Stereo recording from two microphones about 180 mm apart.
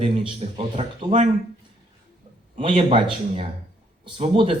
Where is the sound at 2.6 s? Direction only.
30° right (ahead or behind).